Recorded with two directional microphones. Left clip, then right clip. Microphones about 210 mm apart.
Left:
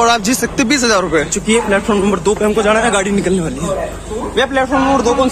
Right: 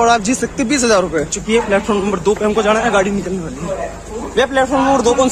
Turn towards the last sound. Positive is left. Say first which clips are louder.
# even
turn(degrees=-30)  # may be behind; listen again after turning